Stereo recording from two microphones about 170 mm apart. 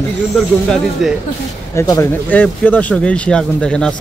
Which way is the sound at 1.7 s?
20° left (ahead or behind).